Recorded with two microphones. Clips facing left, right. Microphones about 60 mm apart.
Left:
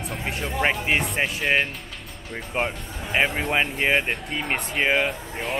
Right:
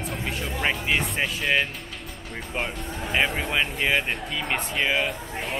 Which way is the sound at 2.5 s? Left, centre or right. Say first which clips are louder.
Left 4 dB; centre.